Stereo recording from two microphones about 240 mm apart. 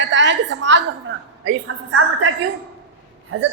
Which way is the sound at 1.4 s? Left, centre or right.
Right.